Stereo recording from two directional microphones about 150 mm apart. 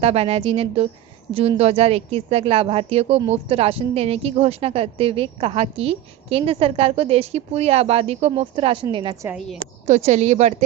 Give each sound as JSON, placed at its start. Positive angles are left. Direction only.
{"t": 0.0, "sound": "a woman's voice", "side_deg": -45}
{"t": 9.8, "sound": "speech", "side_deg": -50}